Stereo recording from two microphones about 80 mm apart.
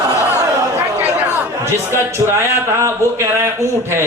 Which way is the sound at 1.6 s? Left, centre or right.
Right.